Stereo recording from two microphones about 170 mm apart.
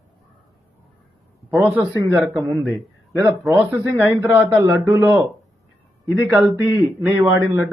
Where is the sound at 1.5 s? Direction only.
15° right (ahead or behind).